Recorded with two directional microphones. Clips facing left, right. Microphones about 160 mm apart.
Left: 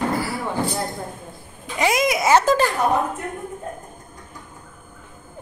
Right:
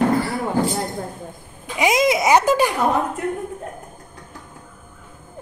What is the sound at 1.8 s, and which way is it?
Speech, 20° right (ahead or behind).